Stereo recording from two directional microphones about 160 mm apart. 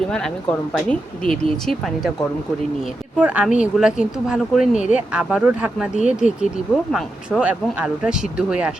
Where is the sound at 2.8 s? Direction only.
10° right (ahead or behind).